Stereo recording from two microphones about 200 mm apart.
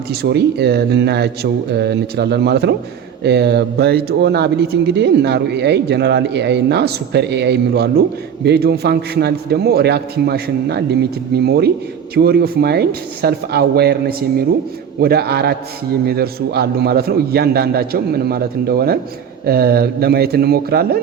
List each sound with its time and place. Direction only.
0.1 s a man's voice: 55° right (ahead or behind)